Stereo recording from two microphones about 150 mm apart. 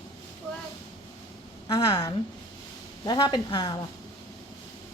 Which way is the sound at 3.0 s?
30° left (ahead or behind).